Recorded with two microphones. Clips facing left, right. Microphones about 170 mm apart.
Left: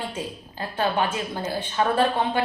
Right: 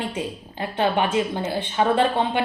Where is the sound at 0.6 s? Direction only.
20° right (ahead or behind).